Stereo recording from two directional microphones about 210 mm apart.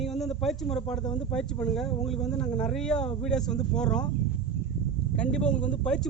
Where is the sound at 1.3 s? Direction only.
5° left (ahead or behind).